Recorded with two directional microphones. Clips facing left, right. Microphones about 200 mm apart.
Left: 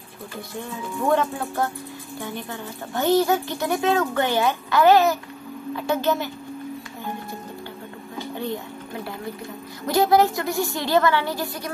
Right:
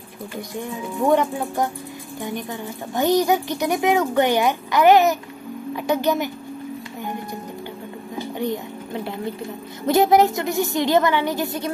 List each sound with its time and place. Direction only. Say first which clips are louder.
0.6 s speech: right 4 dB; 15° right (ahead or behind)
9.8 s a woman's voice: right 2 dB; 20° right (ahead or behind)